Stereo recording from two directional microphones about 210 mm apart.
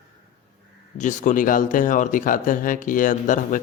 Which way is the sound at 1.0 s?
35° left (ahead or behind).